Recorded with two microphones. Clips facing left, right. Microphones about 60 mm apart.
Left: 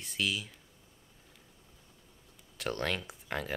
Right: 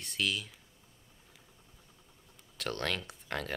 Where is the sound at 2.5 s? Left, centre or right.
Centre.